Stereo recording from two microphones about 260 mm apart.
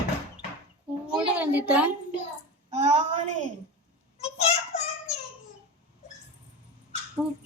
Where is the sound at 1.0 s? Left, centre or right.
Centre.